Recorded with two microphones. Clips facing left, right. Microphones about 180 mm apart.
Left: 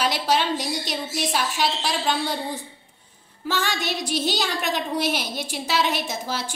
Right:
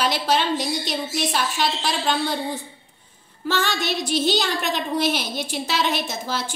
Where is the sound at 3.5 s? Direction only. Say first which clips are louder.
Right 2 dB; 10° left (ahead or behind).